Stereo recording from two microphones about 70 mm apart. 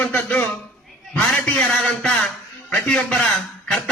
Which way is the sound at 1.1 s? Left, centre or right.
Centre.